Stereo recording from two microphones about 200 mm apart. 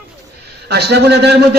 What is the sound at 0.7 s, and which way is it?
Speech, 55° right (ahead or behind).